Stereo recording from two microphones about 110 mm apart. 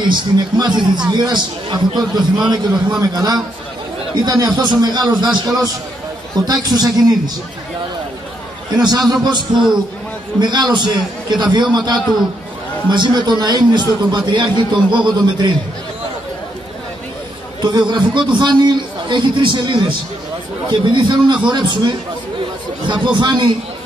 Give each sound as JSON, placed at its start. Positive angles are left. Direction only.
{"t": 0.1, "sound": "a man's voice", "side_deg": -40}
{"t": 8.7, "sound": "a man's voice", "side_deg": -40}
{"t": 10.4, "sound": "a man's voice", "side_deg": -45}
{"t": 17.6, "sound": "a man's voice", "side_deg": -40}